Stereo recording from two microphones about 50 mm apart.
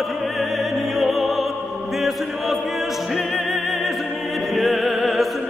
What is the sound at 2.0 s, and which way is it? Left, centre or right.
Chant, centre.